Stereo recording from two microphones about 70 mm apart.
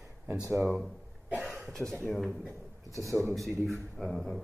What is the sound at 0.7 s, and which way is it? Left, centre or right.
Cough, centre.